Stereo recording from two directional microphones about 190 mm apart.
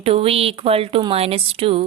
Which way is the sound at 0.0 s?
30° right (ahead or behind).